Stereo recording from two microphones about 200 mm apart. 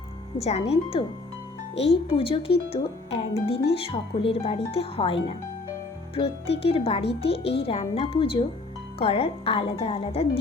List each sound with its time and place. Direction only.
0.3 s speech: 30° left (ahead or behind)